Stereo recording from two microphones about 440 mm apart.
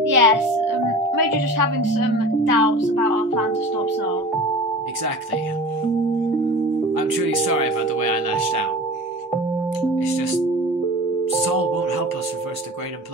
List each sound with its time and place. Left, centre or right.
0.1 s a child's voice: right
6.9 s speech: right
11.4 s speech: right